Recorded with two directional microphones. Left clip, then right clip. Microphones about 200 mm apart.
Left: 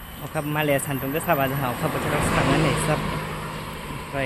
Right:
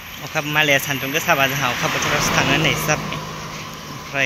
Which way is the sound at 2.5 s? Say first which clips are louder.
Right 4 dB; centre (ahead or behind).